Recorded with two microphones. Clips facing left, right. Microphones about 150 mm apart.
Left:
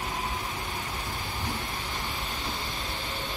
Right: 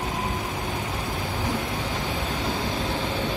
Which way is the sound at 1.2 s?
60° right (ahead or behind).